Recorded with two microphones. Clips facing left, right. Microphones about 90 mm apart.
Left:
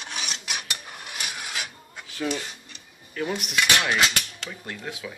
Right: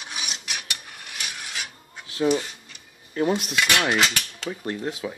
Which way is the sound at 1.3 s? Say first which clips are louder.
Left 1 dB; 5° left (ahead or behind).